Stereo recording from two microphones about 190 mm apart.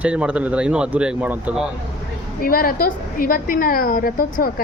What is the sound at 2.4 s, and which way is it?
A woman's voice, 50° left (ahead or behind).